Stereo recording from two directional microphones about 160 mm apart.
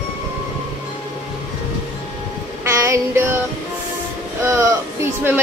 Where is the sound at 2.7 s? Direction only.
20° right (ahead or behind).